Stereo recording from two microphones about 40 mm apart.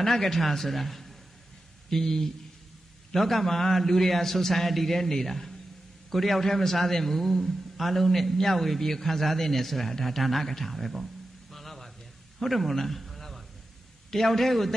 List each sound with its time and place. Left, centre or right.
0.0 s a man's voice: centre
11.5 s a sound: centre
12.4 s a man's voice: centre